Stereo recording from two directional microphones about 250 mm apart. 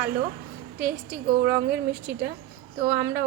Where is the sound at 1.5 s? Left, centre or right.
Centre.